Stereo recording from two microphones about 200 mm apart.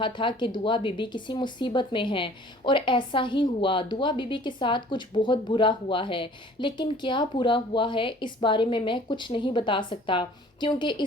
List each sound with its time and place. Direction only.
0.0 s speech: 25° left (ahead or behind)